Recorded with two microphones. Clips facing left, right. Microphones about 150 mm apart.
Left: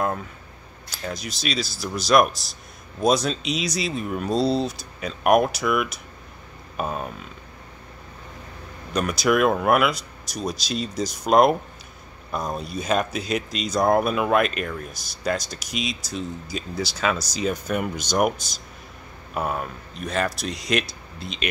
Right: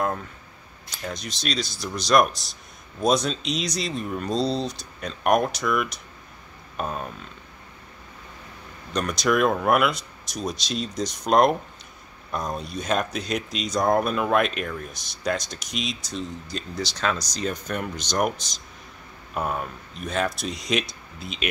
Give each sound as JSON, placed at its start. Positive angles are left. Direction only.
{"t": 0.9, "sound": "speech", "side_deg": 5}
{"t": 8.9, "sound": "speech", "side_deg": 5}